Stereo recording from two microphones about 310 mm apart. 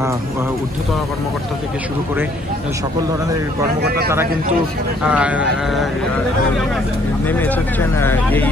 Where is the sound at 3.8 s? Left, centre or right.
Right.